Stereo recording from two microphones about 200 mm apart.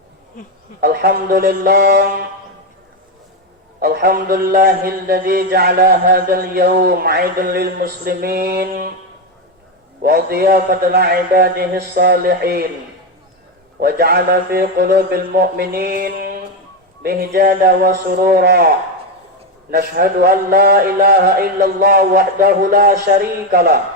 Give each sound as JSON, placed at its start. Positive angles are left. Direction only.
{"t": 0.4, "sound": "speech", "side_deg": 40}
{"t": 0.8, "sound": "a man's voice", "side_deg": -50}
{"t": 3.8, "sound": "a man's voice", "side_deg": -50}
{"t": 10.0, "sound": "a man's voice", "side_deg": -50}
{"t": 13.7, "sound": "a man's voice", "side_deg": -50}
{"t": 19.7, "sound": "a man's voice", "side_deg": -50}